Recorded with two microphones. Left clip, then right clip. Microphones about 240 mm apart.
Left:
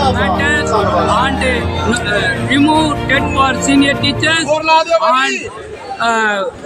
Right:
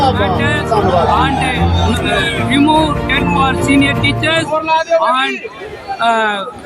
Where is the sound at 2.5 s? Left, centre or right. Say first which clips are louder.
Right 1 dB; centre.